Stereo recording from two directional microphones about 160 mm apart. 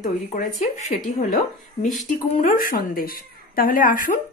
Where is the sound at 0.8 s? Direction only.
50° left (ahead or behind).